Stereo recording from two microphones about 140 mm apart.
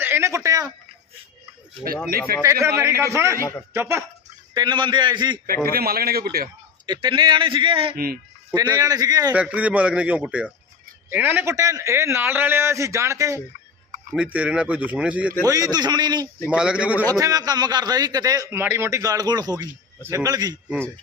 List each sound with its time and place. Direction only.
0.0 s speech: 15° right (ahead or behind)
2.0 s speech: 90° right
2.4 s speech: 20° right (ahead or behind)
4.5 s a man's voice: 35° right (ahead or behind)
5.6 s speech: 90° right
6.8 s a man's voice: 35° right (ahead or behind)
7.9 s speech: 90° right
8.5 s speech: 25° right (ahead or behind)
9.3 s speech: 10° right (ahead or behind)
11.5 s speech: 25° right (ahead or behind)
14.1 s speech: 10° right (ahead or behind)
15.4 s speech: 25° right (ahead or behind)
16.5 s speech: 5° right (ahead or behind)
17.2 s speech: 25° right (ahead or behind)